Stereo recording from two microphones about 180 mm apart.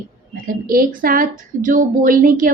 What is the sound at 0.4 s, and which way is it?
Speech, 55° right (ahead or behind).